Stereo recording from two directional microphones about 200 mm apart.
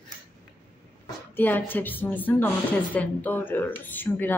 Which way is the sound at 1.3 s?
10° left (ahead or behind).